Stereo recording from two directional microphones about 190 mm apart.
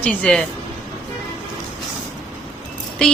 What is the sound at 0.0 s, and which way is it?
Speech, 5° left (ahead or behind).